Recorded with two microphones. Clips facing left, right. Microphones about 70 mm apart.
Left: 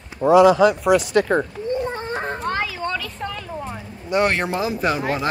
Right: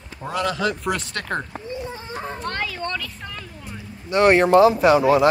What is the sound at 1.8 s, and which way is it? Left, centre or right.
Children playing, left.